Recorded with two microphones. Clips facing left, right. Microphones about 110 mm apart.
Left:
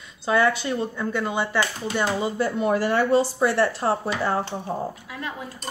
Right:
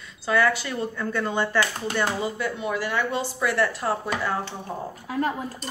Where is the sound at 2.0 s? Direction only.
20° left (ahead or behind).